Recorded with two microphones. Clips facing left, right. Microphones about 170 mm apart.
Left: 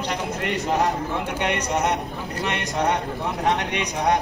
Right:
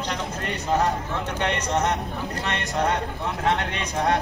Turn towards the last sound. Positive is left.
turn(degrees=15)  # may be behind; listen again after turning